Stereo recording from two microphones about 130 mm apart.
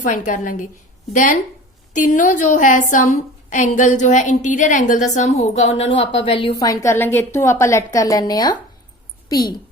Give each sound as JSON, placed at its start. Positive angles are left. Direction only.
{"t": 0.0, "sound": "a woman's voice", "side_deg": 75}
{"t": 1.9, "sound": "a woman's voice", "side_deg": 75}
{"t": 6.6, "sound": "a woman's voice", "side_deg": 25}